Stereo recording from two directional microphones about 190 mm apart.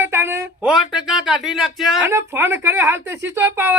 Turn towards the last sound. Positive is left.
turn(degrees=-10)  # may be behind; listen again after turning